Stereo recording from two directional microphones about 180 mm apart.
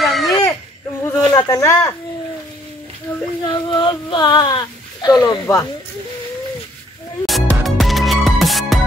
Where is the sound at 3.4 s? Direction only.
25° left (ahead or behind).